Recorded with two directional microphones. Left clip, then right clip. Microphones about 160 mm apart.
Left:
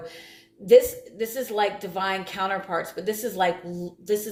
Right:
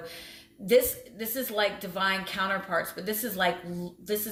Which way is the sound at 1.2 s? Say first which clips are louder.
Left 4 dB; 20° left (ahead or behind).